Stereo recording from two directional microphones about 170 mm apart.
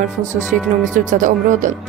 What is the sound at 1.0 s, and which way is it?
Speech, 50° right (ahead or behind).